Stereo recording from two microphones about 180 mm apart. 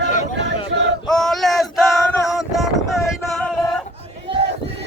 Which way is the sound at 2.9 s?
Centre (ahead or behind).